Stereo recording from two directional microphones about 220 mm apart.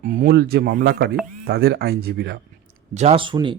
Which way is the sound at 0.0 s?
40° right (ahead or behind).